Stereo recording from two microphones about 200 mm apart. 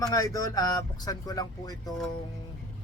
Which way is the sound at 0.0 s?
15° left (ahead or behind).